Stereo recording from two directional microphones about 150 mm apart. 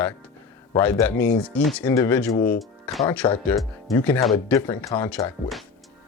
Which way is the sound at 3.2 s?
30° left (ahead or behind).